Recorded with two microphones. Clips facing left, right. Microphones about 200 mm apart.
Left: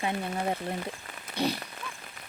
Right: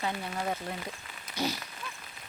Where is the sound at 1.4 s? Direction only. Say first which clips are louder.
Left 3 dB; 60° left (ahead or behind).